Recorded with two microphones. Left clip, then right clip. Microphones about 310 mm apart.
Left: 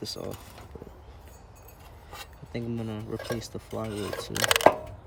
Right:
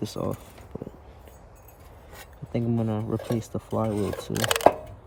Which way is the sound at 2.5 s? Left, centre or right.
Centre.